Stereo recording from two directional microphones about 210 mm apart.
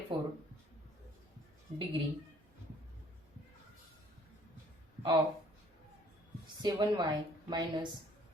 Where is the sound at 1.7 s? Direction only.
35° right (ahead or behind).